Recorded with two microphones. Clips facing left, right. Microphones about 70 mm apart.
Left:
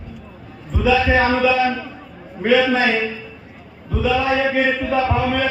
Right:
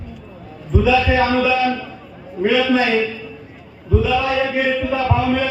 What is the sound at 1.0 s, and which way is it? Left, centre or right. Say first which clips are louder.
A man's voice: even; left.